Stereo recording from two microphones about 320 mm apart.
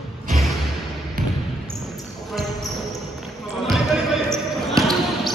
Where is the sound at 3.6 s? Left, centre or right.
Centre.